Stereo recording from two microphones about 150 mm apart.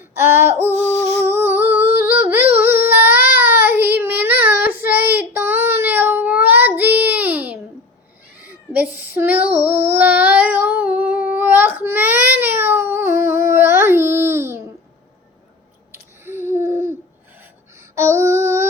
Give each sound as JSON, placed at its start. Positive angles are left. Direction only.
{"t": 0.2, "sound": "female singing", "side_deg": -15}
{"t": 1.0, "sound": "humming", "side_deg": -15}
{"t": 2.6, "sound": "child singing", "side_deg": -15}
{"t": 8.7, "sound": "child singing", "side_deg": -10}
{"t": 15.9, "sound": "a sound", "side_deg": -15}
{"t": 17.9, "sound": "female singing", "side_deg": -15}